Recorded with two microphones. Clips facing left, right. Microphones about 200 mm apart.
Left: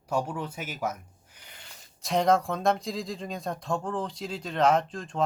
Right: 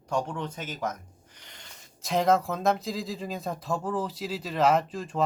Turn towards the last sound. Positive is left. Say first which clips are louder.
# right 1 dB
turn(degrees=-5)  # may be behind; listen again after turning